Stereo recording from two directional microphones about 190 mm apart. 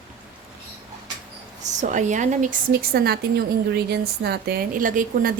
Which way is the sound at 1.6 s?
40° right (ahead or behind).